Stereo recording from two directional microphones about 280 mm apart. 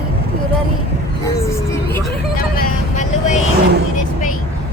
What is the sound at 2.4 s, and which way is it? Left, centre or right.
Vehicle, left.